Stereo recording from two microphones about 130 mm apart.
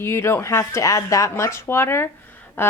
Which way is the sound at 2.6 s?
15° left (ahead or behind).